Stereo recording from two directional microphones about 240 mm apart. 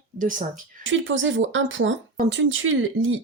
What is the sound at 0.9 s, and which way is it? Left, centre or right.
Speech, right.